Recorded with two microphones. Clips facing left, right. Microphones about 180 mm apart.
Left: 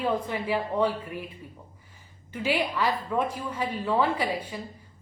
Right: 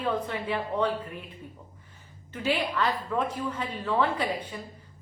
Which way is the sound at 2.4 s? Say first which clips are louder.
Left 1 dB; 10° left (ahead or behind).